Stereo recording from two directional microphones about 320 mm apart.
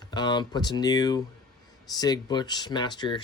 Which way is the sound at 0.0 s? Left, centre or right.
Centre.